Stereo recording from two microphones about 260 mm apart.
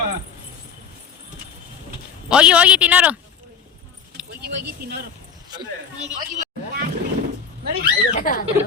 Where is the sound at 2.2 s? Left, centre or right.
Centre.